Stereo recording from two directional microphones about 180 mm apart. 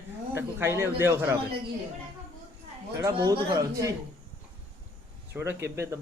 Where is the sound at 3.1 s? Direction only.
25° right (ahead or behind).